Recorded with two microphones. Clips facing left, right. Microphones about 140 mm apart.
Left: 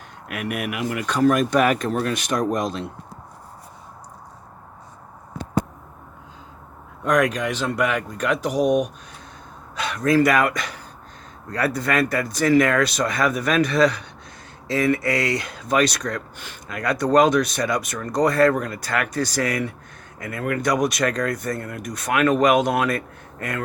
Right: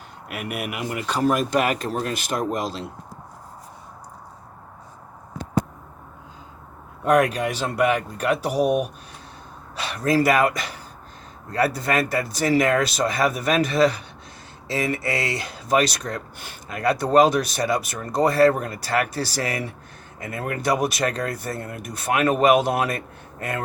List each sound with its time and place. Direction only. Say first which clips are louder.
0.5 s speech: left 2 dB; 5° right (ahead or behind)
2.2 s speech: left 3 dB; 30° right (ahead or behind)
7.0 s speech: right 1 dB; 35° right (ahead or behind)
8.4 s speech: left 3 dB; 5° right (ahead or behind)
9.7 s speech: left 2 dB; 30° right (ahead or behind)